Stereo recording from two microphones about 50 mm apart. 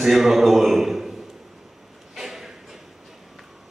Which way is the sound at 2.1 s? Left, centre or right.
Centre.